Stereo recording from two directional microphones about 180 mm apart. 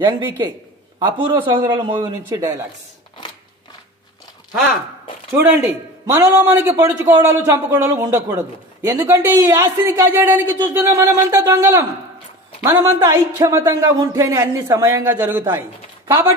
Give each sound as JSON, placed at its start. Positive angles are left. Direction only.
{"t": 0.9, "sound": "a man's voice", "side_deg": -30}
{"t": 5.3, "sound": "a man's voice", "side_deg": -10}